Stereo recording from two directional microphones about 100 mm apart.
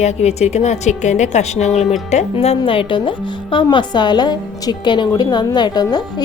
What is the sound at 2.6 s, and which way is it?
A woman's voice, 60° left (ahead or behind).